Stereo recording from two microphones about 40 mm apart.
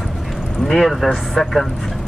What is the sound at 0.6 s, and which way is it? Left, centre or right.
Speech, centre.